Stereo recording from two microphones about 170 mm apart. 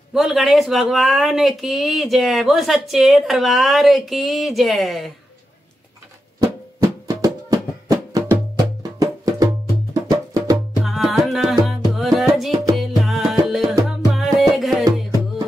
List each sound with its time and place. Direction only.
0.1 s speech: centre (ahead or behind)
6.4 s music: 20° right (ahead or behind)
10.8 s music: centre (ahead or behind)